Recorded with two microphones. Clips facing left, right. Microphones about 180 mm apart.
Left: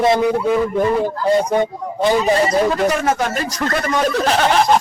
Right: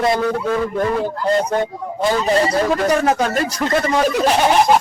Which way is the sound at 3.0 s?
40° right (ahead or behind).